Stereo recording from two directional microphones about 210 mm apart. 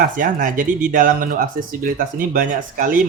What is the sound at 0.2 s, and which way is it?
Speech, 40° right (ahead or behind).